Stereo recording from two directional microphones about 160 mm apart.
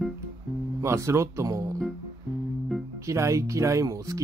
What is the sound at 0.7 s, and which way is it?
Speech, 20° right (ahead or behind).